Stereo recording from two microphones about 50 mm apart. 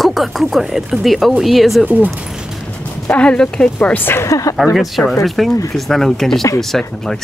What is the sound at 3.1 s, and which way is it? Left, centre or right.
Speech, left.